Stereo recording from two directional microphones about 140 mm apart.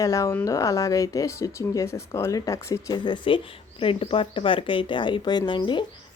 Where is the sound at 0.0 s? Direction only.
20° left (ahead or behind).